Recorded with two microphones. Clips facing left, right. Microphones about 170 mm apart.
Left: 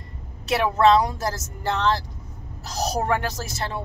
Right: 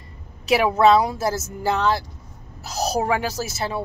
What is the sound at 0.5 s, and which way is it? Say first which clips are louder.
Speech: right 2 dB; 5° right (ahead or behind).